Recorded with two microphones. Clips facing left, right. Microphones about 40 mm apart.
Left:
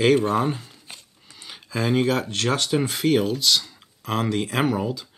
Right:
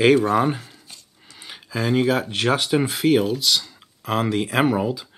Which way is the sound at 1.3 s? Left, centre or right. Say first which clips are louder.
Right 1 dB; centre.